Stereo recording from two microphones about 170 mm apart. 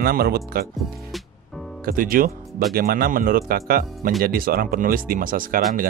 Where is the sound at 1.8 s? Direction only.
55° right (ahead or behind).